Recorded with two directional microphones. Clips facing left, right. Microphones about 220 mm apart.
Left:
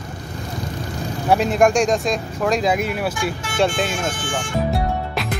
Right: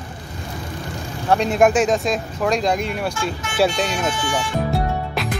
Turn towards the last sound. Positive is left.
turn(degrees=45)  # may be behind; listen again after turning